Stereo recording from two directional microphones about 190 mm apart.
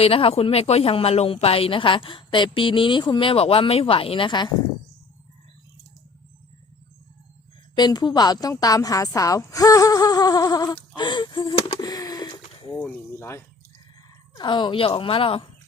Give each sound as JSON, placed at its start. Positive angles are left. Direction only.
{"t": 0.0, "sound": "speech", "side_deg": 30}
{"t": 7.8, "sound": "speech", "side_deg": 25}
{"t": 10.9, "sound": "a sound", "side_deg": 25}
{"t": 12.8, "sound": "speech", "side_deg": 10}
{"t": 14.3, "sound": "speech", "side_deg": 25}